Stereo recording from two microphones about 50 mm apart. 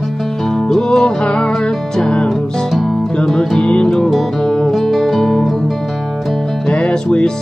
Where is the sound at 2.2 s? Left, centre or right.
Centre.